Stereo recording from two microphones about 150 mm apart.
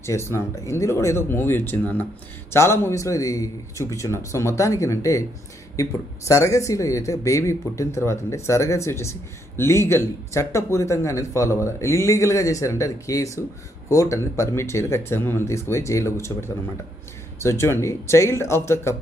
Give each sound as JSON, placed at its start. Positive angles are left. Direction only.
{"t": 0.0, "sound": "speech", "side_deg": 20}